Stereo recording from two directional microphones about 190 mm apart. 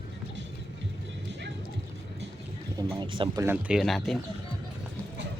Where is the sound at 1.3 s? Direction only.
65° right (ahead or behind).